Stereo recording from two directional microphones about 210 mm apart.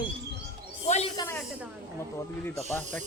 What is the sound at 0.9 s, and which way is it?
Speech, 30° left (ahead or behind).